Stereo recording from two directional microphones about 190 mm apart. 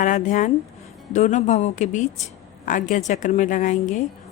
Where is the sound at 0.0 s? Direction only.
40° left (ahead or behind).